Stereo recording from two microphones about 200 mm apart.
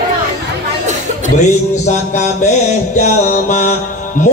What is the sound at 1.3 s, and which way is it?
Music, 35° left (ahead or behind).